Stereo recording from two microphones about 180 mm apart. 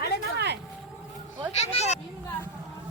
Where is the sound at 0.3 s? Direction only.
65° right (ahead or behind).